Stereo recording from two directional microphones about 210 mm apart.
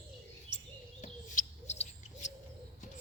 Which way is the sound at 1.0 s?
30° left (ahead or behind).